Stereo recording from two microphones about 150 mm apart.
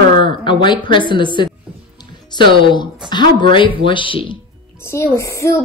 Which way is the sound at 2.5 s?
30° left (ahead or behind).